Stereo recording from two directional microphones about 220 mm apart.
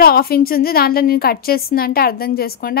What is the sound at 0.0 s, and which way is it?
A woman's voice, 40° left (ahead or behind).